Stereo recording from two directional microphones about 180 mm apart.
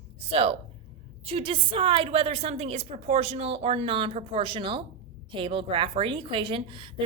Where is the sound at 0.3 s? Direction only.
35° right (ahead or behind).